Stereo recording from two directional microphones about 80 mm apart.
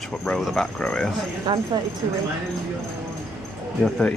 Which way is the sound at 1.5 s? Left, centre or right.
Right.